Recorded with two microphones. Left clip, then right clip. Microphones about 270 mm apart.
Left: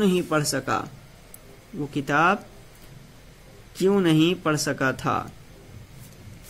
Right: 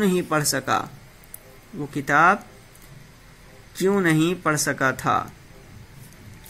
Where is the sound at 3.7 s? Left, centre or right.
Centre.